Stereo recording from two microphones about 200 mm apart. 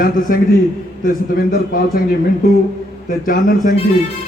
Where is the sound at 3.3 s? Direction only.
45° left (ahead or behind).